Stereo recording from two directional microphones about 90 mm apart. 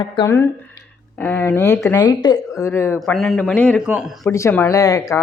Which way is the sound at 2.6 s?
25° left (ahead or behind).